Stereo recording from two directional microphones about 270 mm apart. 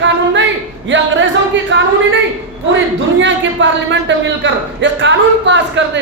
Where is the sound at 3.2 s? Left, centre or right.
Right.